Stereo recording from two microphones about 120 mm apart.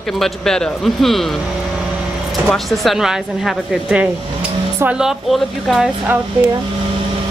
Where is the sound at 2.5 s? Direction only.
Centre (ahead or behind).